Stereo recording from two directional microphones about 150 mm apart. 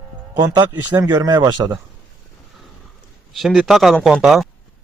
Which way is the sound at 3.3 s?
Centre (ahead or behind).